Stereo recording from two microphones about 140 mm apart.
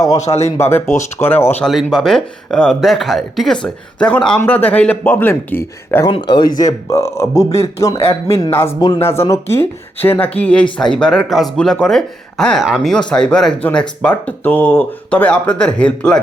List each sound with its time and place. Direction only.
0.2 s a man's voice: 55° left (ahead or behind)
0.5 s speech: 20° left (ahead or behind)
1.6 s speech: centre (ahead or behind)
6.1 s a man's voice: 35° left (ahead or behind); by 16.2 s 5° left (ahead or behind)